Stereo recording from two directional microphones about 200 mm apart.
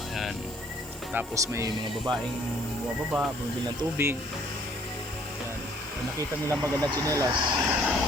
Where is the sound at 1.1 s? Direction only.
10° right (ahead or behind).